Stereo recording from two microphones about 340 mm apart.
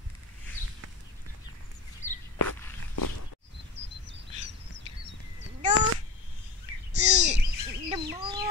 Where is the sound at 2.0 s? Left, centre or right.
Left.